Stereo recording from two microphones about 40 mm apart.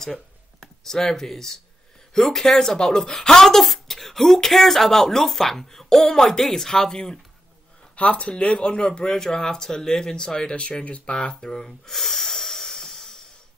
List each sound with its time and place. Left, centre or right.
0.0 s a sound: centre
2.1 s speech: centre
7.9 s speech: left
8.5 s speech: left
10.5 s speech: left; by 11.9 s centre
11.9 s a sound: centre